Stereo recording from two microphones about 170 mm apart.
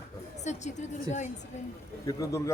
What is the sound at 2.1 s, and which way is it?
Speech, 20° left (ahead or behind).